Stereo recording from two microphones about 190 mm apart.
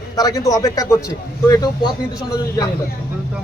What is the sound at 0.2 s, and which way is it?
A man's voice, 20° left (ahead or behind).